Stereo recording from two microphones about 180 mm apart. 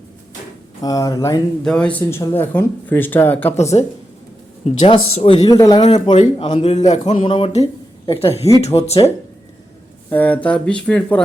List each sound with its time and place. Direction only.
0.8 s speech: 20° left (ahead or behind)
1.6 s speech: 5° left (ahead or behind)
3.6 s speech: 40° left (ahead or behind)
5.5 s speech: 20° left (ahead or behind)
5.8 s speech: 30° left (ahead or behind)
6.5 s speech: 40° left (ahead or behind)
7.3 s speech: 30° left (ahead or behind)
10.1 s speech: 10° left (ahead or behind)